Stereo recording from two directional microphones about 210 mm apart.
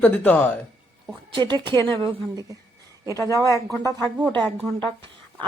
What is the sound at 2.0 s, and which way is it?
Speech, 15° right (ahead or behind).